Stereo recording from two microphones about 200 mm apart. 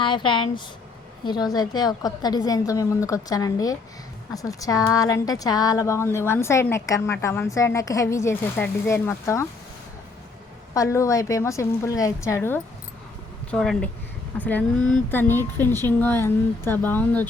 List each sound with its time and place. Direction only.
0.0 s a woman's voice: 25° left (ahead or behind)
10.8 s a woman's voice: 15° left (ahead or behind)